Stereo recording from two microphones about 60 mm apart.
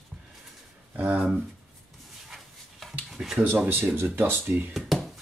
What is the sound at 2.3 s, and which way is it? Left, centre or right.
Dog, centre.